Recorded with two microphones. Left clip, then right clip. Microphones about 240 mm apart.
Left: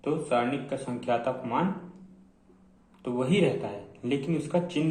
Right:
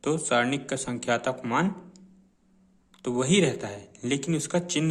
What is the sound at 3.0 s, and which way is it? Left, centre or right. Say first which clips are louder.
Speech: right 2 dB; right.